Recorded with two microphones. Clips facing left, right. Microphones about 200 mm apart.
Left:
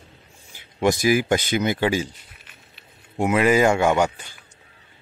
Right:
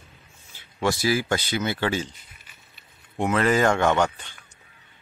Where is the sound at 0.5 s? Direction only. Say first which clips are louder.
Left 4 dB; 15° left (ahead or behind).